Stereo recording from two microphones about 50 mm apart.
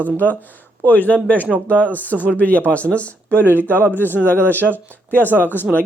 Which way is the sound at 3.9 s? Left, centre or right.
Left.